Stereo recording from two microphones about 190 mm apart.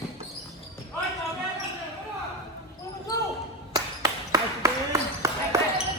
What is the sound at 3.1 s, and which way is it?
Basketball bounce, 20° left (ahead or behind).